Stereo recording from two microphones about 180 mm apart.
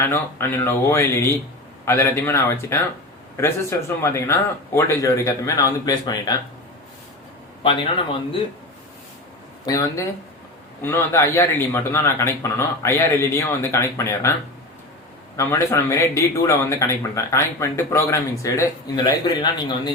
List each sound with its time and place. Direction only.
0.0 s a man's voice: 15° left (ahead or behind)
9.6 s a man's voice: 15° left (ahead or behind)
15.4 s a man's voice: 15° left (ahead or behind)